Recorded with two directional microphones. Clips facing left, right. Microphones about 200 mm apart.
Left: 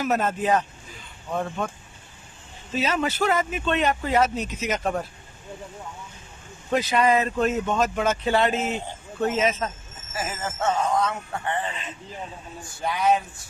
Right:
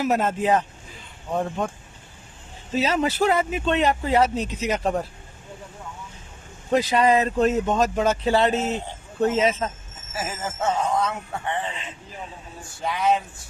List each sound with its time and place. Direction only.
0.0 s speech: 25° right (ahead or behind)
2.7 s speech: 35° right (ahead or behind)
6.7 s speech: 35° right (ahead or behind)
10.2 s speech: 5° right (ahead or behind)
12.8 s speech: centre (ahead or behind)